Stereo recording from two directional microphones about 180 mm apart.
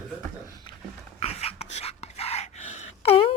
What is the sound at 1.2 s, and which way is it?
Dog, 35° left (ahead or behind).